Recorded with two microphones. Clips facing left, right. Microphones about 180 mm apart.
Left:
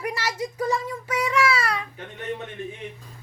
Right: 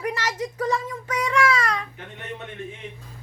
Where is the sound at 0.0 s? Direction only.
10° left (ahead or behind).